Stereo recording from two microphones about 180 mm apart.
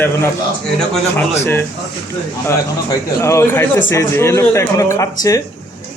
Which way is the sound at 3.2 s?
15° left (ahead or behind).